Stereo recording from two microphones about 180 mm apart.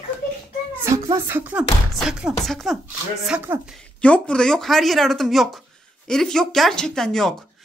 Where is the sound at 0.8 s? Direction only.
15° right (ahead or behind); by 2.8 s centre (ahead or behind).